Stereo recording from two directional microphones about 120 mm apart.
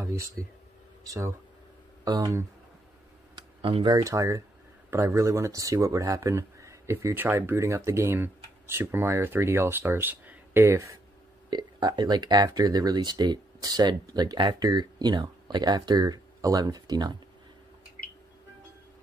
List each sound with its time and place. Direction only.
0.0 s speech: 25° right (ahead or behind)
3.3 s computer keyboard: 40° right (ahead or behind)
3.9 s speech: 25° right (ahead or behind)
11.5 s speech: 35° right (ahead or behind)